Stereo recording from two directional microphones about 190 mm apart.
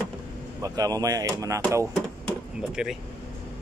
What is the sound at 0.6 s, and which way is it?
Speech, 20° right (ahead or behind).